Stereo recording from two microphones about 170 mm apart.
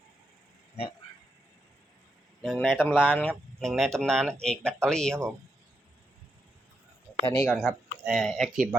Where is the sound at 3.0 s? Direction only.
10° left (ahead or behind).